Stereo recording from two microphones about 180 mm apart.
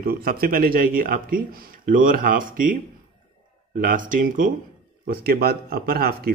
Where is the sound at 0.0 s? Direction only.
55° right (ahead or behind).